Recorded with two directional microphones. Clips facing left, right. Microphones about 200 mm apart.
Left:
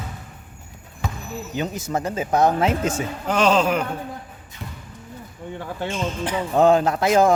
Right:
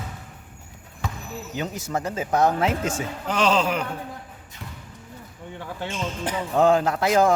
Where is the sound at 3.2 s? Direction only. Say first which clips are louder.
Left 3 dB; 50° left (ahead or behind).